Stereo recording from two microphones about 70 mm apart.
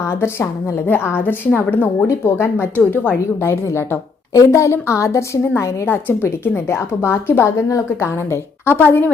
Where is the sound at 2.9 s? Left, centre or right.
Left.